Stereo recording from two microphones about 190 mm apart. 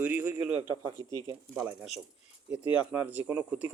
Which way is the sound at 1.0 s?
20° left (ahead or behind).